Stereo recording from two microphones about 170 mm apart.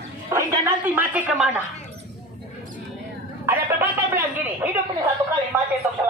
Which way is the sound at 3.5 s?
10° right (ahead or behind).